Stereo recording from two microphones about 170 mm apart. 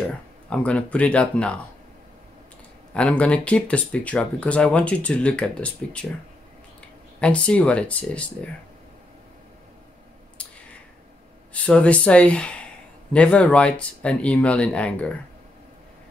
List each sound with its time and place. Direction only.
0.5 s speech: 5° left (ahead or behind)
2.9 s speech: 5° left (ahead or behind)
7.2 s speech: 5° left (ahead or behind)
10.3 s clicking: 5° left (ahead or behind)
11.5 s speech: 5° left (ahead or behind)